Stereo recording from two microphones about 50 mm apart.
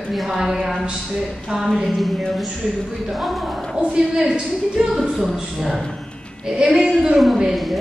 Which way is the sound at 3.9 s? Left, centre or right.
Centre.